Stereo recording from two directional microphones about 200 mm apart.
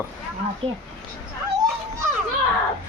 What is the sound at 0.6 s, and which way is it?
Speech, 30° right (ahead or behind).